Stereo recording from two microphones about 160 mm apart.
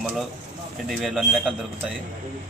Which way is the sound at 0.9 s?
Centre (ahead or behind).